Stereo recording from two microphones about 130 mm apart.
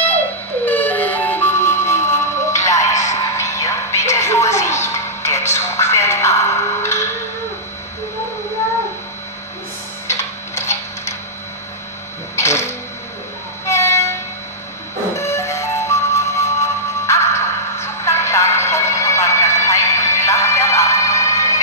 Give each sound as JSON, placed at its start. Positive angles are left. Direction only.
{"t": 0.7, "sound": "music", "side_deg": 15}
{"t": 4.1, "sound": "television", "side_deg": 20}
{"t": 10.0, "sound": "tick-tock", "side_deg": 20}
{"t": 12.4, "sound": "music", "side_deg": 20}
{"t": 13.7, "sound": "train", "side_deg": 20}
{"t": 15.1, "sound": "music", "side_deg": 20}